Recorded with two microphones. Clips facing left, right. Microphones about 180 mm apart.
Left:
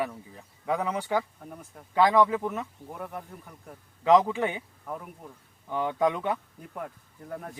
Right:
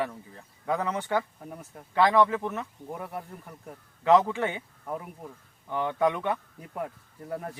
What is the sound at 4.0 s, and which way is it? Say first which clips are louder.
Speech: even; 15° left (ahead or behind).